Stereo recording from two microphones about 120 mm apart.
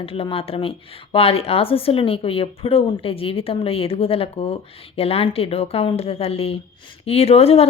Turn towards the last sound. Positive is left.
turn(degrees=55)  # may be behind; listen again after turning